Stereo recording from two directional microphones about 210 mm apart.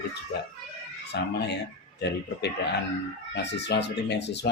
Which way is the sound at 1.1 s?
55° left (ahead or behind).